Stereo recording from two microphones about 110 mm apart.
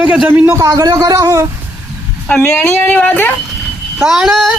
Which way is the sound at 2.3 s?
10° left (ahead or behind).